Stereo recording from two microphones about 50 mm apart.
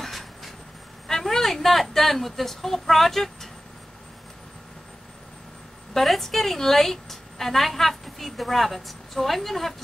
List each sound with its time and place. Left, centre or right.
0.0 s vehicle: centre
1.0 s a woman's voice: centre
5.9 s a woman's voice: centre